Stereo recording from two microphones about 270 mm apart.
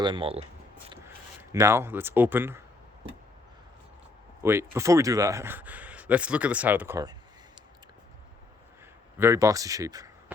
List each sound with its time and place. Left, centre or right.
0.0 s speech: centre
4.4 s speech: centre
9.1 s speech: centre